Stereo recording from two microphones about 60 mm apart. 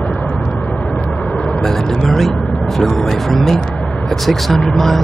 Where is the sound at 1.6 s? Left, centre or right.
Centre.